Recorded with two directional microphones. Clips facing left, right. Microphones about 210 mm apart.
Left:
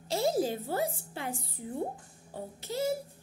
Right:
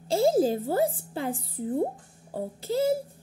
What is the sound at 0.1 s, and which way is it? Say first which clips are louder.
A child's voice: right 7 dB; 30° right (ahead or behind).